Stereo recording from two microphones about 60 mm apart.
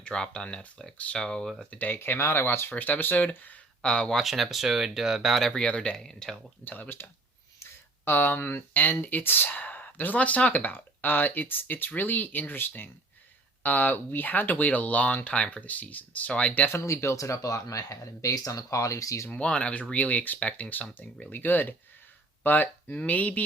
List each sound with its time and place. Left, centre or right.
0.0 s speech: centre
1.7 s speech: left
2.0 s speech: left; by 4.1 s centre
4.1 s speech: centre
5.5 s speech: centre
6.7 s speech: left
16.7 s speech: left
19.3 s speech: centre